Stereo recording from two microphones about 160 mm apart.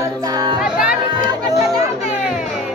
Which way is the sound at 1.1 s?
25° right (ahead or behind).